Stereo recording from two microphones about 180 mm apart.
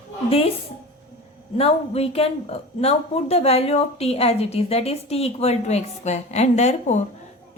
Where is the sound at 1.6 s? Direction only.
35° left (ahead or behind).